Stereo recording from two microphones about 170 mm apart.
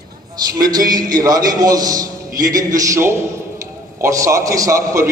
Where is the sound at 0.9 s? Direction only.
20° right (ahead or behind).